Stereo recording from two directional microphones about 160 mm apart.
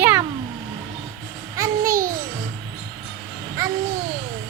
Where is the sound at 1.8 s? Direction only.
60° right (ahead or behind).